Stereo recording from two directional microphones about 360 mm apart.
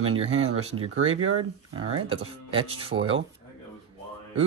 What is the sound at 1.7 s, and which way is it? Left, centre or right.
Speech, centre.